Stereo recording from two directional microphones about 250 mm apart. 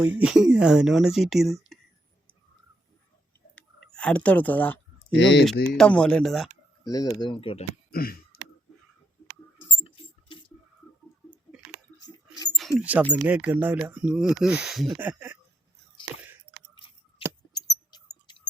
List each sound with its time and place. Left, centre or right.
0.0 s speech: centre
3.9 s speech: centre
5.1 s speech: left
5.6 s speech: centre
6.8 s speech: centre
7.9 s a sound: left
9.8 s rodents: centre
12.5 s a sound: centre
12.8 s speech: centre
16.7 s keys jangling: centre
17.5 s a sound: centre